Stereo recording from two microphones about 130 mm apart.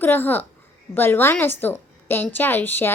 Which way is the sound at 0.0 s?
15° left (ahead or behind).